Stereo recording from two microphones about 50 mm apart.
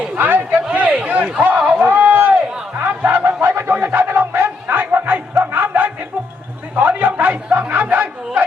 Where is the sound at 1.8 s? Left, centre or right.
Right.